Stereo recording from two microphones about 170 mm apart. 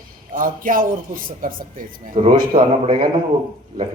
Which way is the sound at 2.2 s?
40° right (ahead or behind).